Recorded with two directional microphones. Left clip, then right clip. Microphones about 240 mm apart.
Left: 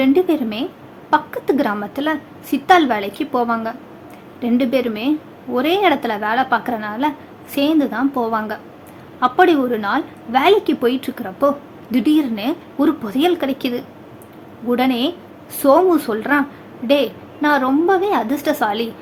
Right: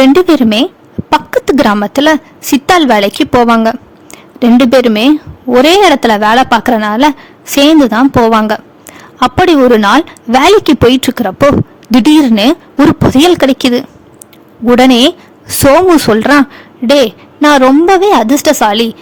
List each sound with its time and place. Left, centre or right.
0.0 s a woman's voice: right